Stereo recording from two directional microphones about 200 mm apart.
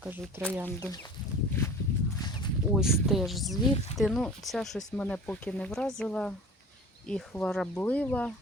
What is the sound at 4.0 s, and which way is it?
Speech, centre (ahead or behind).